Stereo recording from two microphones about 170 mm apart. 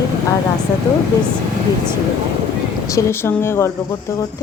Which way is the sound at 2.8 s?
15° left (ahead or behind).